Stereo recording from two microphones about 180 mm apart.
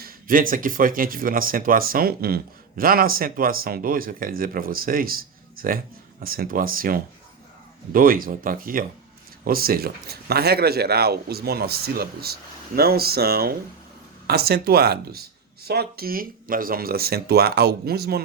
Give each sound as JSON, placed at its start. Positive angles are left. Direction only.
{"t": 0.0, "sound": "speech", "side_deg": -50}